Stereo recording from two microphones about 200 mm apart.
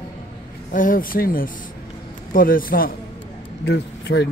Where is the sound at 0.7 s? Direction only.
45° left (ahead or behind).